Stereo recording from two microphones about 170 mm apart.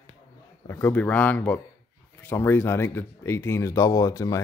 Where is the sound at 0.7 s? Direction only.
15° left (ahead or behind).